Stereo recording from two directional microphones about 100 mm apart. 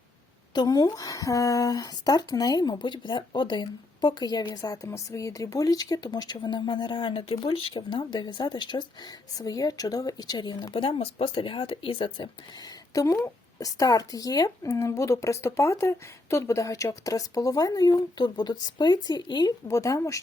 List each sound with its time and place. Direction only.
0.5 s speech: 45° left (ahead or behind)
9.3 s speech: 40° left (ahead or behind)
10.8 s speech: 65° left (ahead or behind)
12.9 s speech: 35° left (ahead or behind)
19.6 s speech: 30° left (ahead or behind)